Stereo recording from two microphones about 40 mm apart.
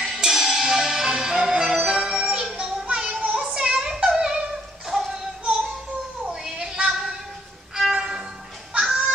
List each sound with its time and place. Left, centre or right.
0.2 s music: centre
3.3 s child singing: centre
4.2 s music: centre
6.4 s a sound: centre
7.9 s violin: centre
8.7 s fowl: right